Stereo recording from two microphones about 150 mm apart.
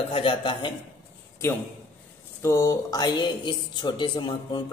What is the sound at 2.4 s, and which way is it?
A man's voice, 20° left (ahead or behind).